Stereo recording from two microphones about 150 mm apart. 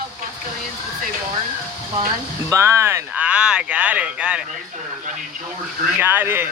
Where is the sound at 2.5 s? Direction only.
20° right (ahead or behind).